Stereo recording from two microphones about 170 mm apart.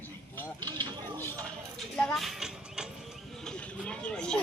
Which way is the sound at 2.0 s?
5° left (ahead or behind).